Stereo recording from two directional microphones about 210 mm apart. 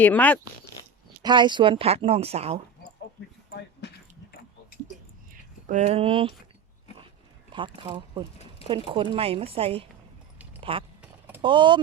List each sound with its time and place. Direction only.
0.0 s speech: 10° left (ahead or behind)
1.2 s a woman's voice: 20° right (ahead or behind)
5.3 s speech: 35° right (ahead or behind)
7.5 s a woman's voice: 20° right (ahead or behind)